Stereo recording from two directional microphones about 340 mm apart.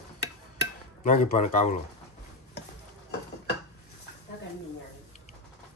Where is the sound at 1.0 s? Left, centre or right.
Left.